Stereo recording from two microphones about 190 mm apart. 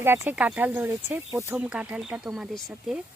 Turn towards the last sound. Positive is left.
turn(degrees=-5)  # may be behind; listen again after turning